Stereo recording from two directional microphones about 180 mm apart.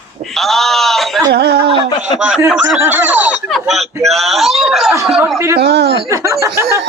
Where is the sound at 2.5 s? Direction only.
5° right (ahead or behind).